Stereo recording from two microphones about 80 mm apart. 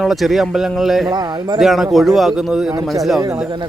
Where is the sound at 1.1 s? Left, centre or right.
Right.